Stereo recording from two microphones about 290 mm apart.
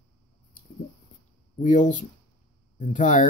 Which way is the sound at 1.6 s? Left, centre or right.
Left.